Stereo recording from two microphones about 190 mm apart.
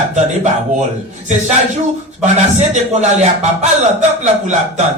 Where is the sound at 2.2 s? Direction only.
40° right (ahead or behind).